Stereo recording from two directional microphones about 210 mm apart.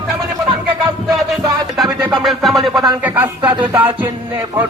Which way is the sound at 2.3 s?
Centre (ahead or behind).